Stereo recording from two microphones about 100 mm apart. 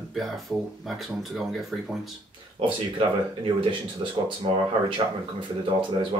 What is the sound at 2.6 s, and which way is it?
Speech, 65° right (ahead or behind).